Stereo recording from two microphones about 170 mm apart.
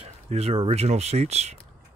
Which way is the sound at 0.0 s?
35° right (ahead or behind).